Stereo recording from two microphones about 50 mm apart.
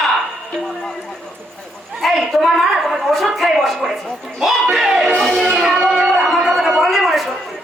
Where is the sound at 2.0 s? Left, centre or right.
Centre.